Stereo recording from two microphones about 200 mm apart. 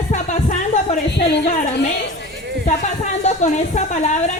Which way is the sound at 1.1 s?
60° left (ahead or behind).